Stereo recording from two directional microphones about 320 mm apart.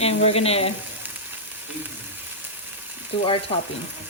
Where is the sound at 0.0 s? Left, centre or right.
Centre.